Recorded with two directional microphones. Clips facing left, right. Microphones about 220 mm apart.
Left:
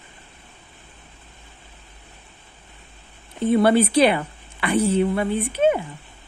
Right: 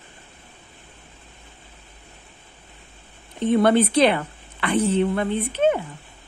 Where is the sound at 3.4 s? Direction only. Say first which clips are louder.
Left 1 dB; 10° left (ahead or behind).